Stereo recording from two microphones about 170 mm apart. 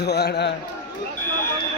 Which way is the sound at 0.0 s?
75° left (ahead or behind).